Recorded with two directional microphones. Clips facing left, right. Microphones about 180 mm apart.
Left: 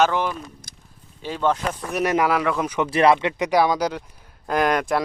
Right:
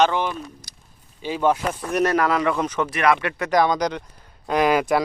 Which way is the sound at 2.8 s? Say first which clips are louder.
Left 4 dB; 30° left (ahead or behind).